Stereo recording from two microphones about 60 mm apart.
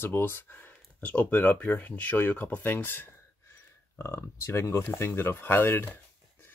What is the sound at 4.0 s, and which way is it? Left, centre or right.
Speech, left.